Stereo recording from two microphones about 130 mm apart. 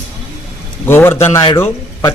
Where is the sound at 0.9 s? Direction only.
20° left (ahead or behind).